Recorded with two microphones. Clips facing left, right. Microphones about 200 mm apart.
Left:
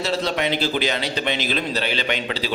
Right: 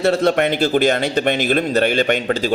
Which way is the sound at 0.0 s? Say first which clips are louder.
Right 7 dB; 55° right (ahead or behind).